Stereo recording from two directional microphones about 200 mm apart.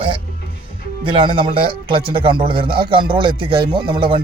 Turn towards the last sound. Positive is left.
turn(degrees=-25)  # may be behind; listen again after turning